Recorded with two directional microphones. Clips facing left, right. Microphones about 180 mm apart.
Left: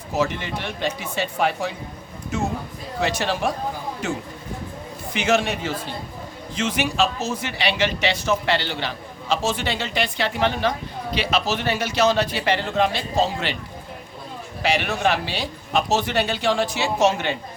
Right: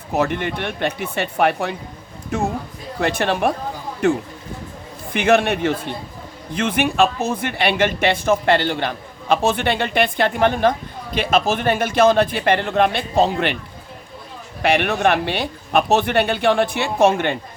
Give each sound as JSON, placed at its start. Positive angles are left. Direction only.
{"t": 0.1, "sound": "a man's voice", "side_deg": -60}
{"t": 14.6, "sound": "speech", "side_deg": -60}